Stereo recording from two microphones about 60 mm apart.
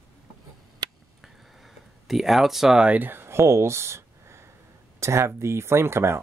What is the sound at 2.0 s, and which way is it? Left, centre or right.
Speech, centre.